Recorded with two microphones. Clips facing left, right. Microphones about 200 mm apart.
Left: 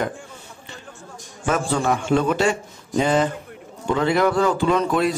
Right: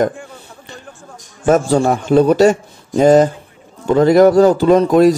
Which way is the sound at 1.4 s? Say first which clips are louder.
Right 9 dB; 40° right (ahead or behind).